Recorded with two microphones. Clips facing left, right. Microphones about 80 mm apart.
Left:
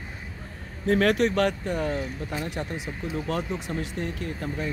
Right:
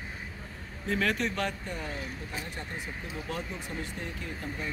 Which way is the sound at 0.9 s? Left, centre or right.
Left.